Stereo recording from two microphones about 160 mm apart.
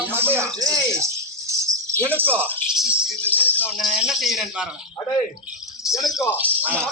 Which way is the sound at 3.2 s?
10° left (ahead or behind).